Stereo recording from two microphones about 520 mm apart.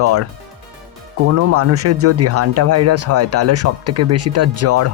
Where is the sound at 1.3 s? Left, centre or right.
Right.